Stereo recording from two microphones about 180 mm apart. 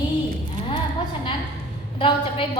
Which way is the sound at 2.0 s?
30° left (ahead or behind).